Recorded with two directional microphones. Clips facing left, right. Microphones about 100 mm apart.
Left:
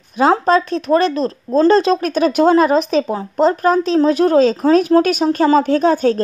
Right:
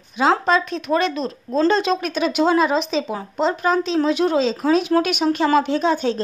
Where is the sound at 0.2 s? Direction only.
40° left (ahead or behind).